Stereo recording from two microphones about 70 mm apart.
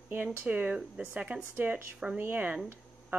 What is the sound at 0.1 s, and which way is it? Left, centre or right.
Speech, right.